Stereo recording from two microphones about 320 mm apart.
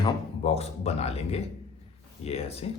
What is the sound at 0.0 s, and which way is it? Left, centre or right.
Speech, centre.